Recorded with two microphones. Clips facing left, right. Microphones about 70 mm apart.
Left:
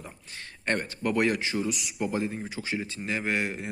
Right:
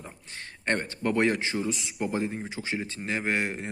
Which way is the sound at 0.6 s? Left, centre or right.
Right.